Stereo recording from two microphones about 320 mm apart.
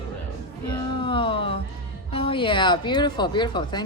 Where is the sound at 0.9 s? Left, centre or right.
Centre.